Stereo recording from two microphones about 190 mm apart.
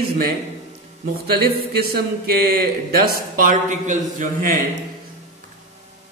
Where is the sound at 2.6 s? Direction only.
50° right (ahead or behind).